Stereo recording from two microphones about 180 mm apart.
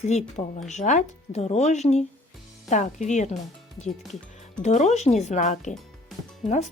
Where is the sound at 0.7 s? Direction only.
40° left (ahead or behind).